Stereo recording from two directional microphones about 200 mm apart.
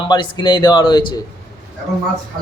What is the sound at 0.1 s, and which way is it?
Speech, 20° left (ahead or behind).